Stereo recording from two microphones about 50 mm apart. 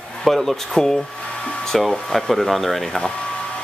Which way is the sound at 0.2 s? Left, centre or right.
Centre.